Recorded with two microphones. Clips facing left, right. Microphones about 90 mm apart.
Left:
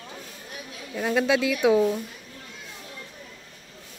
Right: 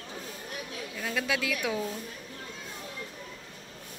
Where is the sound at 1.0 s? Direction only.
30° left (ahead or behind).